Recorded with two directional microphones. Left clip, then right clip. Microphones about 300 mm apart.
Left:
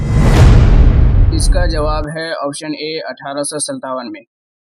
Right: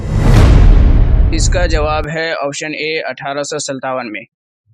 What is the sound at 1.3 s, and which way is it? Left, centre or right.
Speech, left.